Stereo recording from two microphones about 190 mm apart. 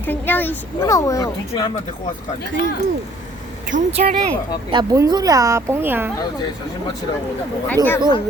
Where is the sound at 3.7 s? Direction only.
40° right (ahead or behind).